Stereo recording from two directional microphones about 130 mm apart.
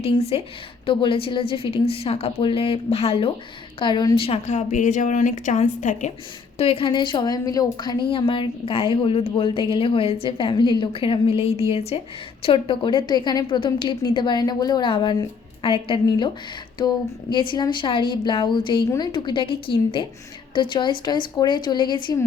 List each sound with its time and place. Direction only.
0.0 s a woman's voice: 50° left (ahead or behind)
3.8 s a woman's voice: 35° left (ahead or behind)
4.4 s a woman's voice: 70° left (ahead or behind)
6.6 s a woman's voice: 45° left (ahead or behind)